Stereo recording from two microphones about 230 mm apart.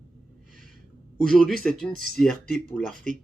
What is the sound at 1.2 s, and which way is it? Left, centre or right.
Speech, centre.